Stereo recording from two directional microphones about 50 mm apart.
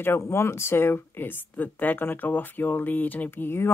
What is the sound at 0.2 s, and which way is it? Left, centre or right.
Speech, left.